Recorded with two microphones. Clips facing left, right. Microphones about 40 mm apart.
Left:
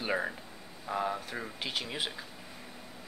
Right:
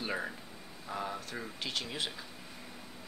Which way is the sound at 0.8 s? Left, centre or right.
Centre.